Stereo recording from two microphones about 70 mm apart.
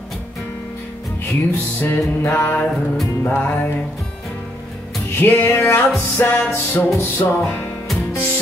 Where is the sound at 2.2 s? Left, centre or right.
Left.